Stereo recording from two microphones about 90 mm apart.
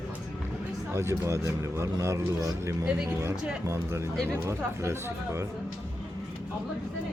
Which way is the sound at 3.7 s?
35° right (ahead or behind).